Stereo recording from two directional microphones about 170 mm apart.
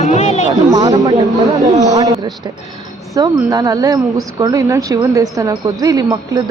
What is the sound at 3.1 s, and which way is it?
Speech, 20° right (ahead or behind).